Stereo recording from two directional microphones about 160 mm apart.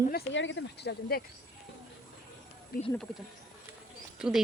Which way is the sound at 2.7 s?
70° left (ahead or behind).